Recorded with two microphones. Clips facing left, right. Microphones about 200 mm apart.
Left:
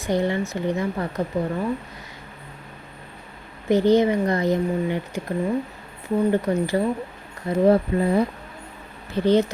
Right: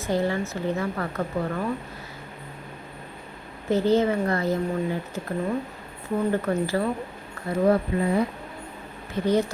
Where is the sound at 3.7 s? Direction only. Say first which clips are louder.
Left 4 dB; 15° left (ahead or behind).